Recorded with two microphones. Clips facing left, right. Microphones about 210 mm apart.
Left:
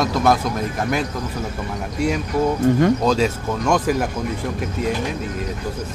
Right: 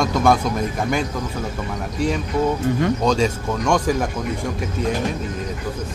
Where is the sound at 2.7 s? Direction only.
45° left (ahead or behind).